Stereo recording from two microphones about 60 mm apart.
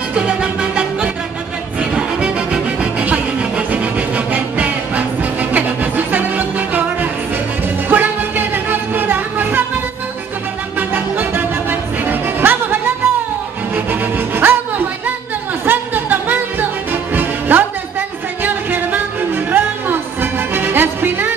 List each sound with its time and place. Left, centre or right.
0.1 s music: centre; by 9.7 s right
10.8 s music: right